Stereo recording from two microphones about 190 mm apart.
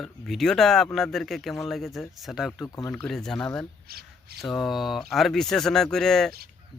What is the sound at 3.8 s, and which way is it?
Shuffling cards, 55° right (ahead or behind).